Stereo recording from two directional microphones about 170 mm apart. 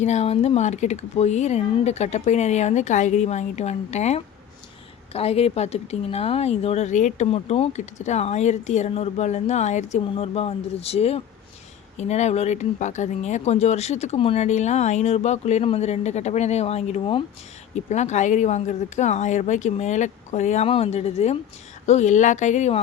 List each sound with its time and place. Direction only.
0.0 s a woman's voice: 40° left (ahead or behind)